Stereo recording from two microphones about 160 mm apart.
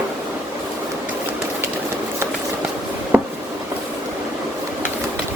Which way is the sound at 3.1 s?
10° right (ahead or behind).